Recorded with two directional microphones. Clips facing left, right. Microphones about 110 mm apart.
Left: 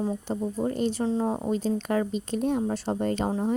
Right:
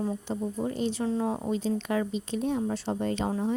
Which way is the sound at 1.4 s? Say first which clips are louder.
Left 2 dB; 45° left (ahead or behind).